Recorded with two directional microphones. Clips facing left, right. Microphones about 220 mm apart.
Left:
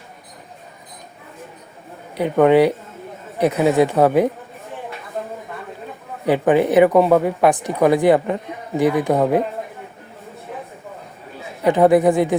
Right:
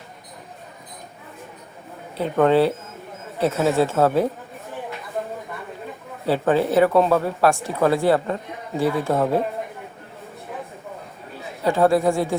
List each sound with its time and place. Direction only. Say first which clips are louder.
2.1 s speech: left 4 dB; 15° left (ahead or behind)
6.2 s speech: left 4 dB; 15° left (ahead or behind)
11.6 s speech: left 4 dB; 20° left (ahead or behind)